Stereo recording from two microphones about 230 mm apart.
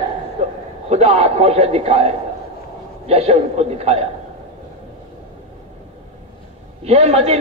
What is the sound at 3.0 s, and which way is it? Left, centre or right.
A man's voice, right.